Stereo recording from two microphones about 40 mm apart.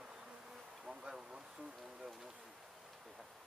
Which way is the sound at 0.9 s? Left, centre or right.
Centre.